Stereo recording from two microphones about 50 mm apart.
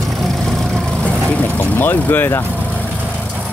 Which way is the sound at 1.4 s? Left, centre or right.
Left.